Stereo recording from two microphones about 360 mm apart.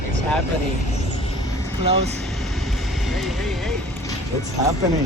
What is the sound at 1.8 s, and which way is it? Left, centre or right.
Speech, centre.